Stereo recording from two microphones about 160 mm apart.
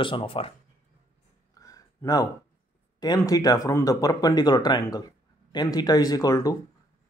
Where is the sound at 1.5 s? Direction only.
20° left (ahead or behind).